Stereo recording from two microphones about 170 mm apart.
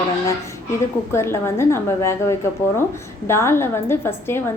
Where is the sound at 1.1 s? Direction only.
15° left (ahead or behind).